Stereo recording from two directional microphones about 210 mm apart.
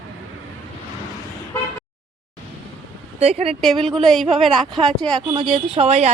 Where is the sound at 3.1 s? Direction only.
30° right (ahead or behind).